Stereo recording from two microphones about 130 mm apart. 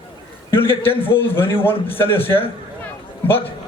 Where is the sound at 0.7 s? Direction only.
15° left (ahead or behind).